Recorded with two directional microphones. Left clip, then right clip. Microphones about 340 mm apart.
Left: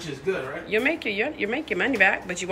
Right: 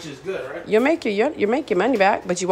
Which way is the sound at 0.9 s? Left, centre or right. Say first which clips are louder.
Right 6 dB; centre.